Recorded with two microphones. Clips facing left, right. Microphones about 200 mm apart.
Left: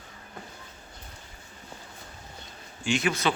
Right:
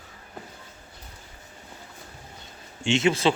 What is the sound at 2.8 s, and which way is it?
Speech, 25° right (ahead or behind).